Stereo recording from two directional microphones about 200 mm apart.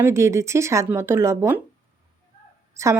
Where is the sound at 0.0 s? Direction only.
15° right (ahead or behind).